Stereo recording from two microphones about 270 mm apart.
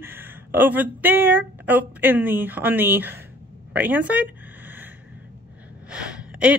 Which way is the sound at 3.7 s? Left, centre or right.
Centre.